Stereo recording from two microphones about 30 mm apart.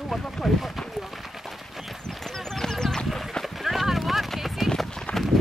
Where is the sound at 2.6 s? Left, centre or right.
Centre.